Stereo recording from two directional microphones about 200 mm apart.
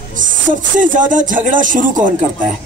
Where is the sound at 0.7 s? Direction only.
40° right (ahead or behind).